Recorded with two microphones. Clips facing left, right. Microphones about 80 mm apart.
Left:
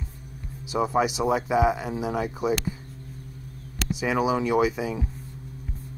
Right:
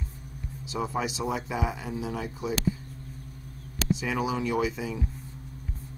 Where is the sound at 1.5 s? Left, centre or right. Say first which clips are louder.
Left 9 dB; left.